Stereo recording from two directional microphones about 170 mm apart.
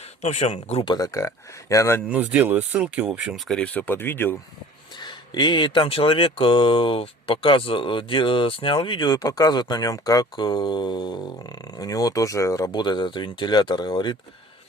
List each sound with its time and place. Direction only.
0.2 s speech: 40° left (ahead or behind)
0.9 s speech: 20° left (ahead or behind)
2.0 s speech: 10° right (ahead or behind); by 4.4 s 10° left (ahead or behind)
4.9 s speech: 25° left (ahead or behind)